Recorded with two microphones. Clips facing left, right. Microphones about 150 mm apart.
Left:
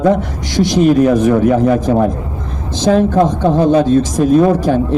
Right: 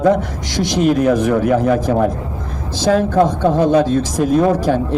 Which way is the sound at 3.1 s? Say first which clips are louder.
Left 2 dB; 15° left (ahead or behind).